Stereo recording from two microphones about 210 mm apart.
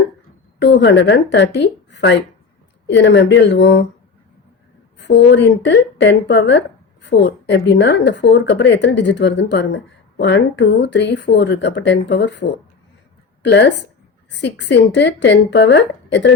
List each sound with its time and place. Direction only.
0.6 s speech: 55° left (ahead or behind)
4.9 s speech: 55° left (ahead or behind)